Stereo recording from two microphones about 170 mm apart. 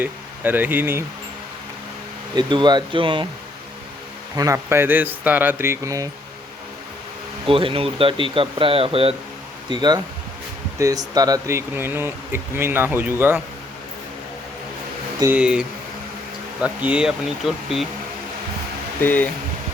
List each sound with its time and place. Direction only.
0.0 s speech: 10° right (ahead or behind)
2.3 s speech: 25° right (ahead or behind)
4.4 s speech: 15° right (ahead or behind)
7.4 s speech: 30° right (ahead or behind); by 13.4 s 10° right (ahead or behind)
15.2 s speech: 10° right (ahead or behind)
19.0 s speech: 10° left (ahead or behind)